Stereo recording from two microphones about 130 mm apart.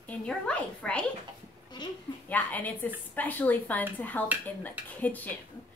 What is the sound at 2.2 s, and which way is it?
Speech, 10° left (ahead or behind).